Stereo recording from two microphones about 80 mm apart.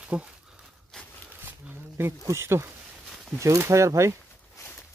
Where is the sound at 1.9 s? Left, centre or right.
Right.